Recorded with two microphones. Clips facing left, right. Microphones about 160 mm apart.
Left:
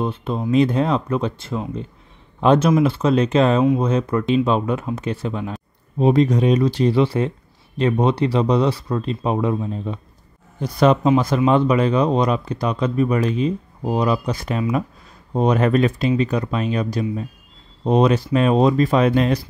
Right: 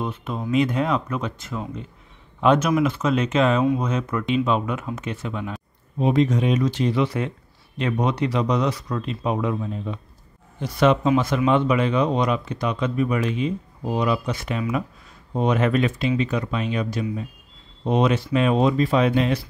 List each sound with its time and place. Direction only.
0.0 s speech: 30° left (ahead or behind)